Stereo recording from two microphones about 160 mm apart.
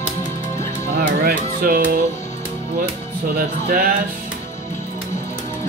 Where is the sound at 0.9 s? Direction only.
65° right (ahead or behind).